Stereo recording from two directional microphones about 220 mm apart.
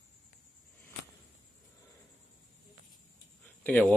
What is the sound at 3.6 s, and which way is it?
Speech, 5° left (ahead or behind).